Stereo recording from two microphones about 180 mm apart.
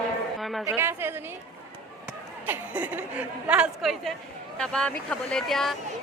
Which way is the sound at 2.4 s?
10° right (ahead or behind).